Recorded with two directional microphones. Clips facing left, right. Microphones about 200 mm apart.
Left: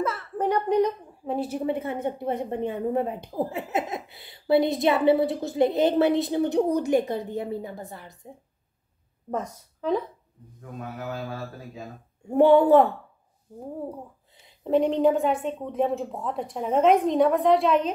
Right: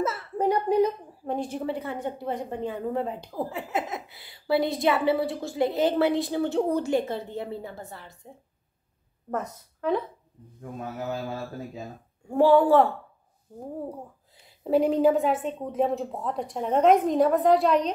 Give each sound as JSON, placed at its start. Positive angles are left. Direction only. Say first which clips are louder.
{"t": 0.0, "sound": "a sound", "louder": "right 1 dB", "side_deg": -10}
{"t": 1.3, "sound": "a woman's voice", "louder": "left 2 dB", "side_deg": 5}
{"t": 1.7, "sound": "a woman's voice", "louder": "left 3 dB", "side_deg": 20}
{"t": 9.3, "sound": "a woman's voice", "louder": "left 1 dB", "side_deg": 10}
{"t": 12.3, "sound": "a woman's voice", "louder": "left 2 dB", "side_deg": 20}
{"t": 14.6, "sound": "a woman's voice", "louder": "even", "side_deg": -5}